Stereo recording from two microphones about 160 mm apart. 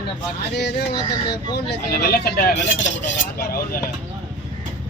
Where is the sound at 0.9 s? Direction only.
25° left (ahead or behind).